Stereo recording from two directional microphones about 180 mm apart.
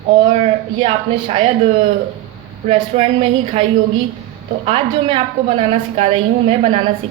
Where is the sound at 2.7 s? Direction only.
35° right (ahead or behind).